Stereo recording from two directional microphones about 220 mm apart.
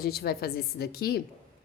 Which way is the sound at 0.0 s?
45° left (ahead or behind).